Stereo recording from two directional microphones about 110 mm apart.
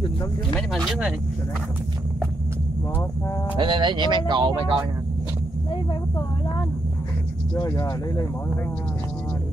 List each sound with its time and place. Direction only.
0.6 s speech: 5° left (ahead or behind)
3.5 s speech: 45° right (ahead or behind)